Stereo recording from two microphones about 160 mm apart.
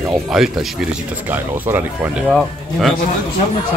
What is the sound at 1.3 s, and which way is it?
Speech, 10° right (ahead or behind).